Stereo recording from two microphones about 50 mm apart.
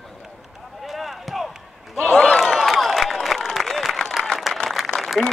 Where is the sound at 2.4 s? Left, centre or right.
Centre.